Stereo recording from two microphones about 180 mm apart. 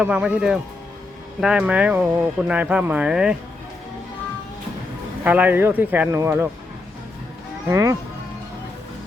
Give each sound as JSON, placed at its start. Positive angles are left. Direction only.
{"t": 0.0, "sound": "speech", "side_deg": -10}
{"t": 5.2, "sound": "speech", "side_deg": -10}
{"t": 7.7, "sound": "speech", "side_deg": -15}